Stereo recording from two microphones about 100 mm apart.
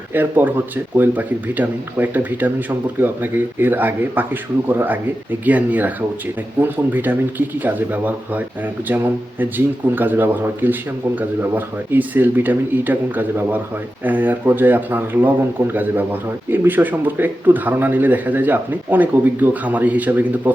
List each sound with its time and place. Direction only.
0.1 s speech: 15° right (ahead or behind)